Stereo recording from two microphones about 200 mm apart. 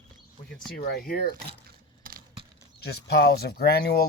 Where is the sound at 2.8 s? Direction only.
55° left (ahead or behind).